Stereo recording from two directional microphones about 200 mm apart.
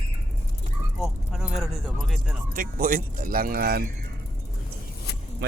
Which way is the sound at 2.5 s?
45° right (ahead or behind).